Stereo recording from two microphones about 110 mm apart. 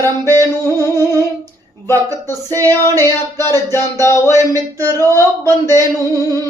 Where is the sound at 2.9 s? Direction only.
25° left (ahead or behind).